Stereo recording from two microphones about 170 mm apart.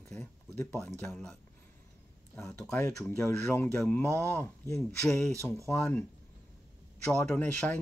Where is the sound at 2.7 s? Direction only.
20° left (ahead or behind).